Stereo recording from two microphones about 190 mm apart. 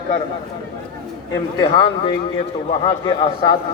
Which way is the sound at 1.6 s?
25° left (ahead or behind).